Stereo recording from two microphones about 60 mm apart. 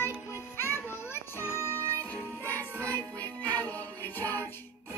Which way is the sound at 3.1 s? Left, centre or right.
Left.